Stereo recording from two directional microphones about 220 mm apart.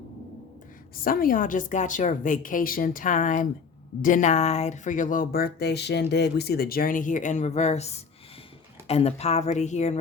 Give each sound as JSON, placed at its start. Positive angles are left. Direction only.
{"t": 1.0, "sound": "speech", "side_deg": 40}